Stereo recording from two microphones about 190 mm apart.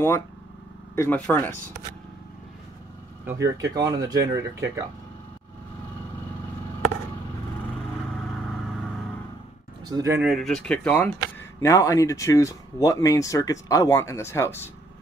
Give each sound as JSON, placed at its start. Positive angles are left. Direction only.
{"t": 0.9, "sound": "speech", "side_deg": 10}
{"t": 3.3, "sound": "speech", "side_deg": -15}
{"t": 9.8, "sound": "speech", "side_deg": -15}
{"t": 10.2, "sound": "speech", "side_deg": 0}
{"t": 11.6, "sound": "speech", "side_deg": 15}